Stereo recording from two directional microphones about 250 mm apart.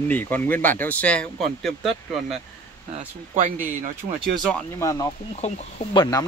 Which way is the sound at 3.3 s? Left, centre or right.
Right.